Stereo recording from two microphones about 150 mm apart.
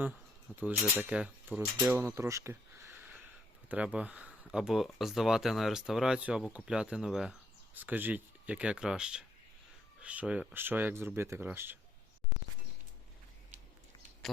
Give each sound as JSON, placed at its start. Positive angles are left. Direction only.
{"t": 0.0, "sound": "speech", "side_deg": -10}